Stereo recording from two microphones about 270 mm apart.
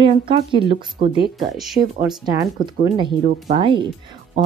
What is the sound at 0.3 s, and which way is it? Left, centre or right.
Speech, centre.